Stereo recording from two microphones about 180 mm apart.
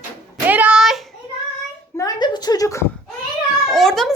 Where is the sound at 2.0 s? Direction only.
20° left (ahead or behind).